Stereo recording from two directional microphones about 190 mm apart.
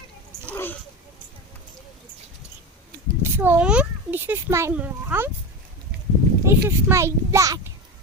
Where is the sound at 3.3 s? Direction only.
10° right (ahead or behind).